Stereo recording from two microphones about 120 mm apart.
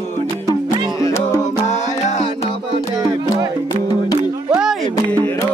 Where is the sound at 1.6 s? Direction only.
75° left (ahead or behind).